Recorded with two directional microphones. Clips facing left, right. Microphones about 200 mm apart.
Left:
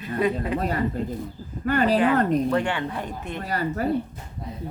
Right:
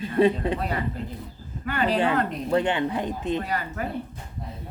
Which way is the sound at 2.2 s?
45° left (ahead or behind).